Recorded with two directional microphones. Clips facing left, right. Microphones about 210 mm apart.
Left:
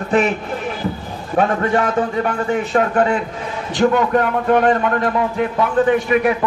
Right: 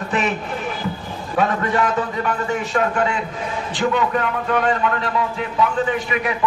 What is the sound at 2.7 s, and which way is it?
Speech, 40° left (ahead or behind).